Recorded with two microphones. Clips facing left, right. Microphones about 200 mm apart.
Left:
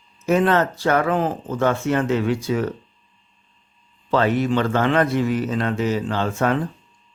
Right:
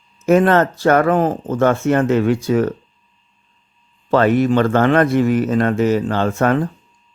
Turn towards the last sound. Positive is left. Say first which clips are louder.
# right 4 dB
turn(degrees=-50)  # may be behind; listen again after turning